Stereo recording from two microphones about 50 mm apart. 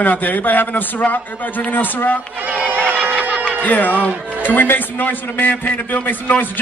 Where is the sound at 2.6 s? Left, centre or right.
Right.